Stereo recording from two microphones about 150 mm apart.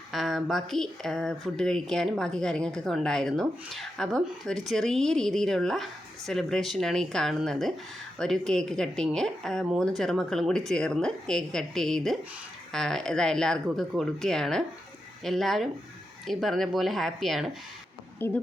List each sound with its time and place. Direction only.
0.1 s speech: centre (ahead or behind)
18.2 s a woman's voice: 15° left (ahead or behind)